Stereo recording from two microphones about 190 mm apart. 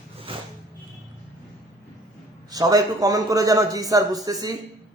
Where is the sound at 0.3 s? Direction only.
30° right (ahead or behind).